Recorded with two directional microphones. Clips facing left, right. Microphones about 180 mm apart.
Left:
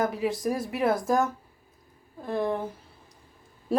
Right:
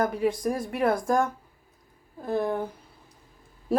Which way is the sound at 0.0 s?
Centre (ahead or behind).